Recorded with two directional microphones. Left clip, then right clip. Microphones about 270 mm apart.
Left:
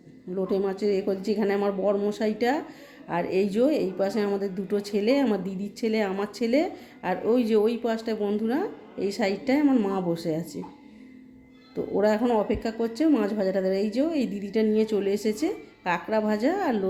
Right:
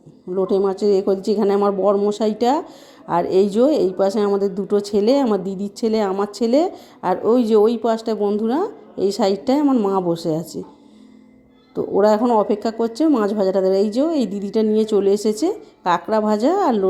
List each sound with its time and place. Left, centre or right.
0.3 s speech: centre
11.7 s speech: right